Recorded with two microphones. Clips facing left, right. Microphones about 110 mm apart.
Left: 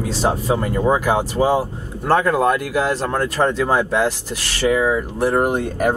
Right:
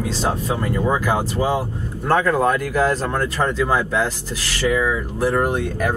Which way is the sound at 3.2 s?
40° left (ahead or behind).